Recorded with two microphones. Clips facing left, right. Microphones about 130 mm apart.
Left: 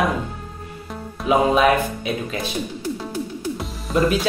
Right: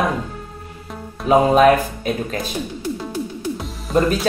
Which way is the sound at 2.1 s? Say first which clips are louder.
Right 6 dB; 45° right (ahead or behind).